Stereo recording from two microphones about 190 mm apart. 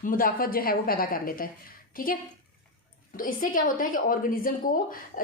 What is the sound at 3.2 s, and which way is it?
Speech, 45° left (ahead or behind).